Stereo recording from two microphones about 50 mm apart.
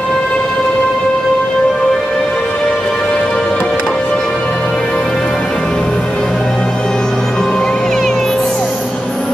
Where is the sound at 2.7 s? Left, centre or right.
Centre.